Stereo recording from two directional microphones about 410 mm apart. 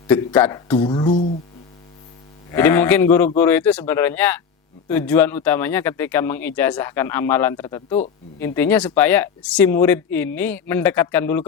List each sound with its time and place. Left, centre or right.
0.1 s speech: centre
2.5 s speech: centre